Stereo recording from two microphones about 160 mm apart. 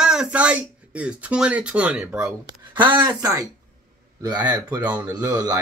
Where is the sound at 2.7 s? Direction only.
25° right (ahead or behind).